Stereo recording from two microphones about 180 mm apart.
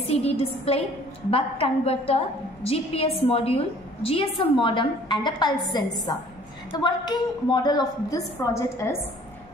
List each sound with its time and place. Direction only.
0.0 s a woman's voice: 35° left (ahead or behind); by 8.9 s 15° left (ahead or behind)